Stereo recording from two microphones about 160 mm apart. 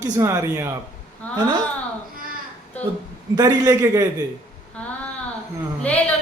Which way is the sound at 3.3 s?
20° right (ahead or behind).